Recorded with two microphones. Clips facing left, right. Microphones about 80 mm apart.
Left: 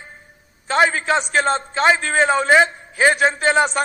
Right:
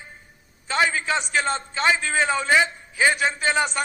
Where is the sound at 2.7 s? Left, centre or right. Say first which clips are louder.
Left 4 dB; left.